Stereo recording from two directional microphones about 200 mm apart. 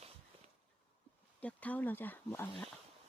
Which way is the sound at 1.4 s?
5° left (ahead or behind).